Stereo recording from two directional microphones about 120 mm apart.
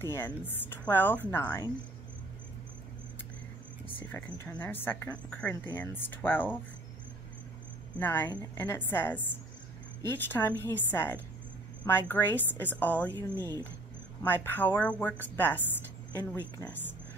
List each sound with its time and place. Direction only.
0.0 s speech: 20° left (ahead or behind)
4.1 s speech: 15° left (ahead or behind)
8.0 s speech: 15° left (ahead or behind)